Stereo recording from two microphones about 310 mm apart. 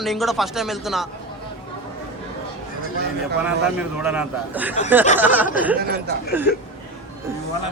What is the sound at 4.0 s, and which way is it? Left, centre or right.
Speech, centre.